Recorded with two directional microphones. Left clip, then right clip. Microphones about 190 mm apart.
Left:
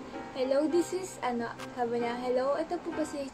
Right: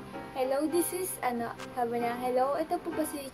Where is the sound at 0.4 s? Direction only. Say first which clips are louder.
Left 1 dB; 5° right (ahead or behind).